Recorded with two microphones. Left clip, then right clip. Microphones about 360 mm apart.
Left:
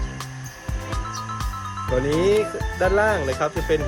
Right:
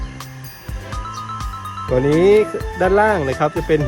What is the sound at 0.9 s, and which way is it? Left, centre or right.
Music, centre.